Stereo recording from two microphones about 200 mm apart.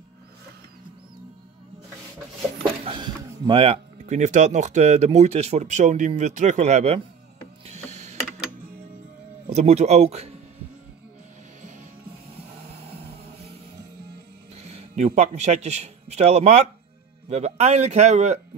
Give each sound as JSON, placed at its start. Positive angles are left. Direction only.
{"t": 2.8, "sound": "speech", "side_deg": -25}
{"t": 7.6, "sound": "a sound", "side_deg": -35}
{"t": 9.5, "sound": "speech", "side_deg": -35}
{"t": 14.5, "sound": "speech", "side_deg": -30}